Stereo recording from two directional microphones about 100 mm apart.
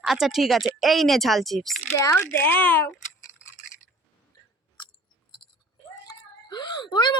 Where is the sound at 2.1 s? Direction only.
20° left (ahead or behind).